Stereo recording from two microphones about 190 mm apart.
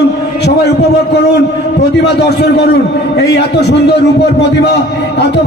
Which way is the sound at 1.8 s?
60° left (ahead or behind).